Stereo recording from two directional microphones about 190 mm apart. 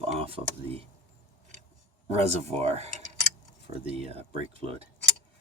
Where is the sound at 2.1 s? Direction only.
35° right (ahead or behind).